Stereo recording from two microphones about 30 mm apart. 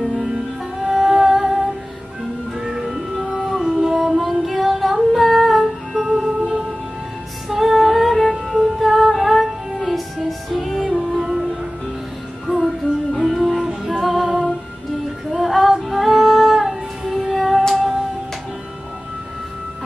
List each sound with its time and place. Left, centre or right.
1.2 s music: centre
11.1 s music: centre
12.4 s music: centre